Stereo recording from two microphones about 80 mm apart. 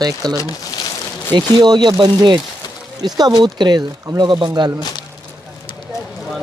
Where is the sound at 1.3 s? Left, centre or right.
Right.